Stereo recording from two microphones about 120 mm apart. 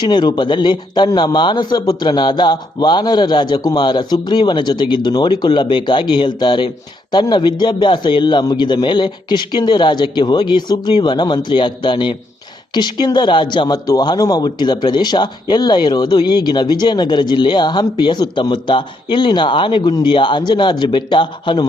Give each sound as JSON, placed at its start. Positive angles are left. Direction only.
{"t": 0.0, "sound": "speech", "side_deg": 35}